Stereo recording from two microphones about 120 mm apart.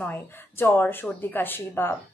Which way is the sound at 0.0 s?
15° left (ahead or behind).